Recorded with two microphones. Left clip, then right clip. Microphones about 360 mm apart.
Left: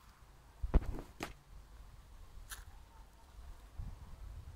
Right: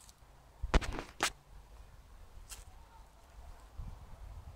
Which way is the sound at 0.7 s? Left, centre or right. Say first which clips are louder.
Right 8 dB; right.